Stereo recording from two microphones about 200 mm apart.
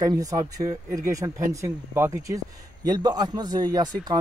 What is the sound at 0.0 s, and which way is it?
A man's voice, 15° right (ahead or behind).